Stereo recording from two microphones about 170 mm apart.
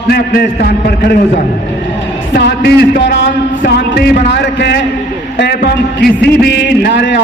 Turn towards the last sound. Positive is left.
turn(degrees=85)